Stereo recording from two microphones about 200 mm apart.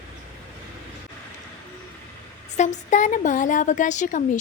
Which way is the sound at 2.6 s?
35° left (ahead or behind).